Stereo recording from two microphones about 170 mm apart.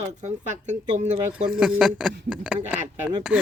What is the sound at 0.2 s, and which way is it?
Speech, 45° right (ahead or behind).